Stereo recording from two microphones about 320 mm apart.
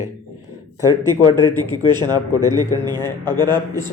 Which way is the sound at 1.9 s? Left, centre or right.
Centre.